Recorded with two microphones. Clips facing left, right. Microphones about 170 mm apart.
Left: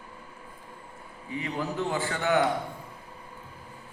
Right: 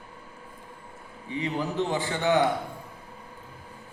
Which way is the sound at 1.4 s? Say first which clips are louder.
Right 3 dB; 20° right (ahead or behind).